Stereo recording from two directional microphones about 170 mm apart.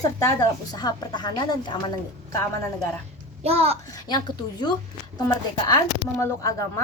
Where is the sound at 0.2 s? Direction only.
20° left (ahead or behind).